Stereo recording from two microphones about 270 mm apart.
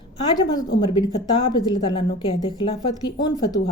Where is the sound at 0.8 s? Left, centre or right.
Centre.